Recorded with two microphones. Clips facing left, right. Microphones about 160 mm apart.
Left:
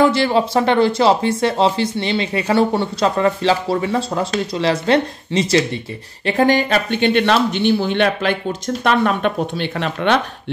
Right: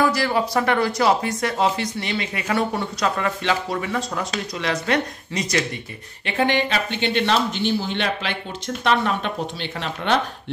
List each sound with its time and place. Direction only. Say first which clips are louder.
0.0 s speech: left 5 dB; 25° left (ahead or behind)
6.2 s speech: left 6 dB; 40° left (ahead or behind); by 10.1 s 60° left (ahead or behind)